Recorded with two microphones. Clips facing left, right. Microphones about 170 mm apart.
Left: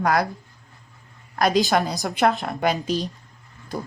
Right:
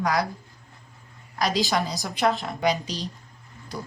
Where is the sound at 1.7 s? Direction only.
55° left (ahead or behind).